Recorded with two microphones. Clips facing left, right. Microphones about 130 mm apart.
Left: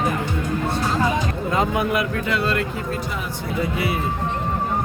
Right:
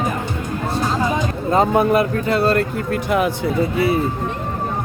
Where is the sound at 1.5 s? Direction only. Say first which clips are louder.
Right 7 dB; 35° right (ahead or behind).